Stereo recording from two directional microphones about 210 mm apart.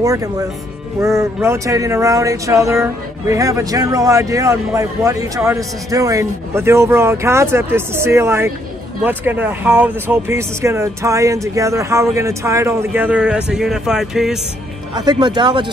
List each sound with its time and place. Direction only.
0.0 s speech: 15° right (ahead or behind)
15.0 s speech: 20° right (ahead or behind)